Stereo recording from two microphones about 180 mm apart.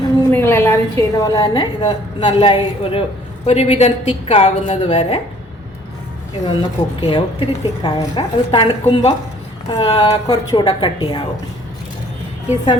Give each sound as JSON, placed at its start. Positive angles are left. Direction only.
{"t": 0.3, "sound": "a woman's voice", "side_deg": 15}
{"t": 6.4, "sound": "a woman's voice", "side_deg": 25}